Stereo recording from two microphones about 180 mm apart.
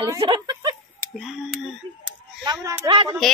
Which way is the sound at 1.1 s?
Centre (ahead or behind).